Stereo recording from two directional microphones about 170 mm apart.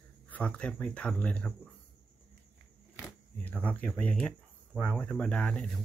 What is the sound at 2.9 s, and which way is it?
Speech, 10° left (ahead or behind).